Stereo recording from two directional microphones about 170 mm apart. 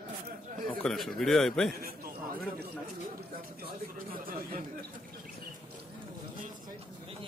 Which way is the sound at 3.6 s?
55° right (ahead or behind).